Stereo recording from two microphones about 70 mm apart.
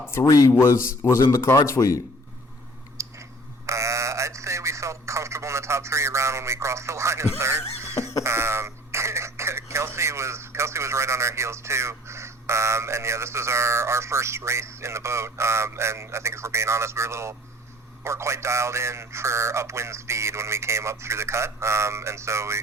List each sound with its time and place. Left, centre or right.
0.1 s speech: left
0.6 s a man's voice: left
3.0 s a sound: right
8.2 s throat clearing: right
18.0 s a man's voice: right